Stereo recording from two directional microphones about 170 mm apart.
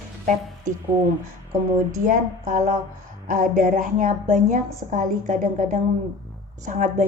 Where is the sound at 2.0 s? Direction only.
50° right (ahead or behind).